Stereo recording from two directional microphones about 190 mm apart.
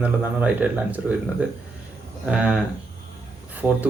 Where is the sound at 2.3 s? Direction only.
5° right (ahead or behind).